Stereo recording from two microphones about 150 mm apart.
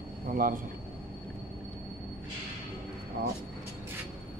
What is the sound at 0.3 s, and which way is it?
Speech, 70° right (ahead or behind).